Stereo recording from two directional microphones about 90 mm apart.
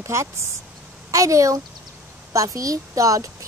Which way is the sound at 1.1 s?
40° right (ahead or behind).